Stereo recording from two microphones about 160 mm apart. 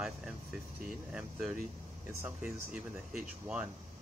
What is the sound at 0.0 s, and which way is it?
Speech, 5° right (ahead or behind).